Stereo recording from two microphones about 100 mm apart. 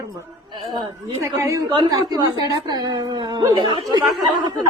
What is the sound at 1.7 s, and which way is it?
A woman's voice, 50° right (ahead or behind).